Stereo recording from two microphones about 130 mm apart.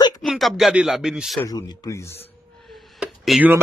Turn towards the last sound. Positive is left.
turn(degrees=-5)  # may be behind; listen again after turning